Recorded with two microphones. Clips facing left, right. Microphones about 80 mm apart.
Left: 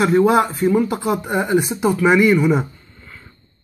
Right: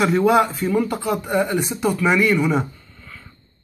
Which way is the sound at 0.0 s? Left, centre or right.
Centre.